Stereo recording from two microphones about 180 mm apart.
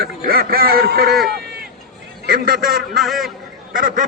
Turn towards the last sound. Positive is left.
turn(degrees=-50)  # may be behind; listen again after turning